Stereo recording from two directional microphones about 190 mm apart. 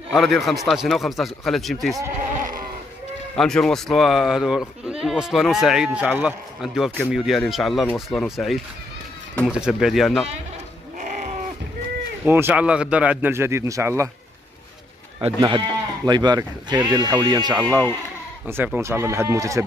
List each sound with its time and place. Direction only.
0.1 s speech: centre (ahead or behind)
2.3 s goat: 45° right (ahead or behind)
3.3 s speech: 5° left (ahead or behind)
9.6 s speech: centre (ahead or behind)
11.0 s sheep: 40° right (ahead or behind)
12.3 s a man's voice: 10° right (ahead or behind)
15.1 s a man's voice: 25° right (ahead or behind)